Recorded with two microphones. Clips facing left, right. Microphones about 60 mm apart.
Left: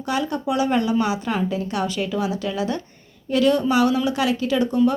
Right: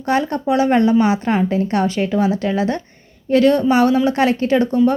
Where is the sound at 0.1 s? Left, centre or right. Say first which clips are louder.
Right 6 dB; right.